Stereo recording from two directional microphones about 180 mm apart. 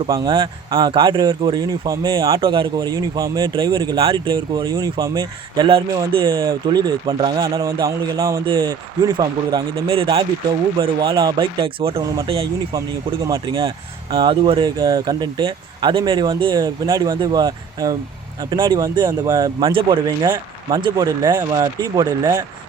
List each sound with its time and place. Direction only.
0.1 s speech: 25° right (ahead or behind)
10.8 s speech: 20° right (ahead or behind)
12.0 s speech: 20° right (ahead or behind)